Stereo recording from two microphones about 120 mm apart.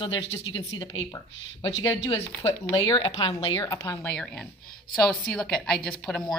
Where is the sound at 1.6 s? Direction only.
30° left (ahead or behind).